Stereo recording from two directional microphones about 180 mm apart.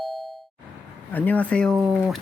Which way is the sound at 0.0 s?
Centre (ahead or behind).